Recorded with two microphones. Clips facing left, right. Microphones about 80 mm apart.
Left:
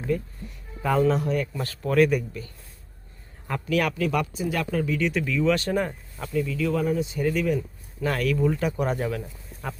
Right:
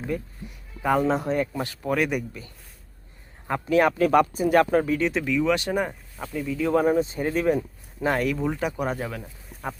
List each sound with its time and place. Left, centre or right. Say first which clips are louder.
0.8 s speech: even; centre
1.1 s a man's voice: right 1 dB; right
1.6 s speech: left 4 dB; centre
3.4 s a man's voice: right 4 dB; right
4.0 s speech: right 6 dB; right
5.2 s speech: even; centre
6.7 s speech: right 8 dB; right
8.0 s speech: even; right; by 9.3 s centre
9.6 s a man's voice: right 2 dB; centre